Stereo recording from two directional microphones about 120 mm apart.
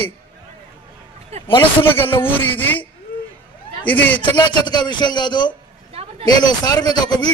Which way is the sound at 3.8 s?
15° left (ahead or behind).